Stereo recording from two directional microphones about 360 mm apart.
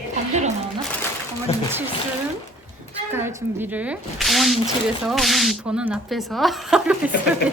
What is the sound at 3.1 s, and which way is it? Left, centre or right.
A woman's voice, centre.